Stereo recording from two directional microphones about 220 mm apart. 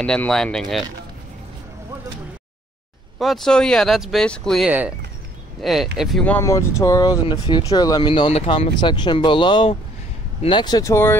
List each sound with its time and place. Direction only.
0.0 s speech: 5° left (ahead or behind)
3.2 s speech: centre (ahead or behind)